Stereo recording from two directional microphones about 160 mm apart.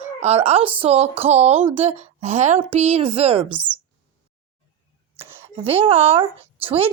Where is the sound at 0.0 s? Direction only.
40° right (ahead or behind).